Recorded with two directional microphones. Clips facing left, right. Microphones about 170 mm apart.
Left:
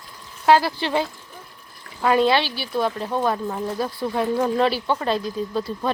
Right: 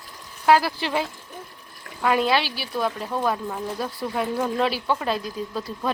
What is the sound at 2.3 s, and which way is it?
Speech, centre (ahead or behind).